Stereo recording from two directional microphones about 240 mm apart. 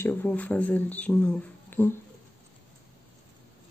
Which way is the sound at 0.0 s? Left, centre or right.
Centre.